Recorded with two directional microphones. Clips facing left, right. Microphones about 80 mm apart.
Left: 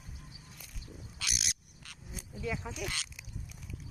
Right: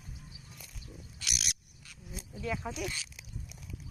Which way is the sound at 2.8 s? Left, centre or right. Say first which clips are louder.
Even; left.